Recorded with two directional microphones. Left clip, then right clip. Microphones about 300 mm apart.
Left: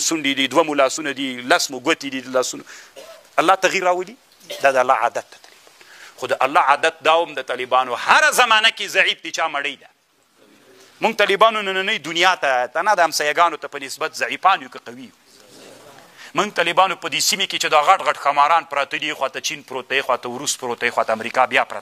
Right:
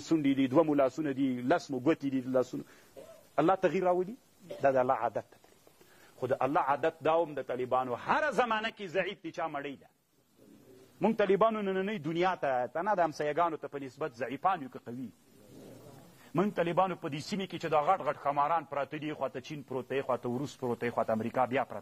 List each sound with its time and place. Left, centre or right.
0.2 s a man's voice: centre
6.2 s a man's voice: centre
11.0 s a man's voice: centre
16.3 s a man's voice: centre